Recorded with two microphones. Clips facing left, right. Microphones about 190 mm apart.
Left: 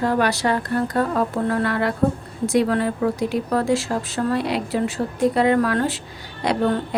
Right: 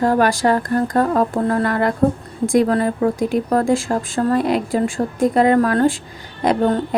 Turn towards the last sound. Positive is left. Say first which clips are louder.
# right 4 dB
turn(degrees=-45)  # may be behind; listen again after turning